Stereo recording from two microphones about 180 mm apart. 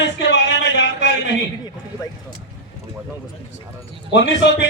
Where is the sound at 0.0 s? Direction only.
75° left (ahead or behind).